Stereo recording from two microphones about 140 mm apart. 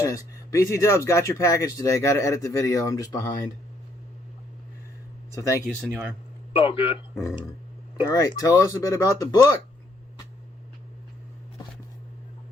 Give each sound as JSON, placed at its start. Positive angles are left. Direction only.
{"t": 0.0, "sound": "speech", "side_deg": 20}
{"t": 5.3, "sound": "speech", "side_deg": 20}
{"t": 5.6, "sound": "speech", "side_deg": 0}
{"t": 6.5, "sound": "a man's voice", "side_deg": 40}
{"t": 8.0, "sound": "speech", "side_deg": 25}